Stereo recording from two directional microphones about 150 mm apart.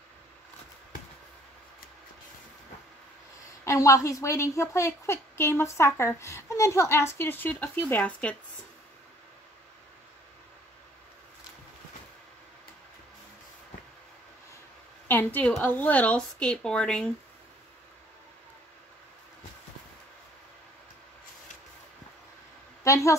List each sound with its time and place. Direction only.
3.6 s a woman's voice: 20° left (ahead or behind)
15.0 s a woman's voice: 10° left (ahead or behind)
22.8 s a sound: 20° left (ahead or behind)